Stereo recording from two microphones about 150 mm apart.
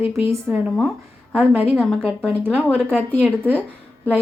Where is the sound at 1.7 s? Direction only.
5° left (ahead or behind).